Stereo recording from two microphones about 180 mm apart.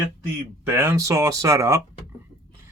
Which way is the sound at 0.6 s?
15° right (ahead or behind).